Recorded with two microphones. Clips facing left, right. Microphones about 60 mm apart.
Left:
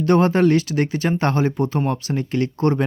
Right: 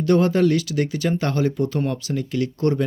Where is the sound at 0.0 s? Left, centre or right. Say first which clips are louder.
Left 2 dB; left.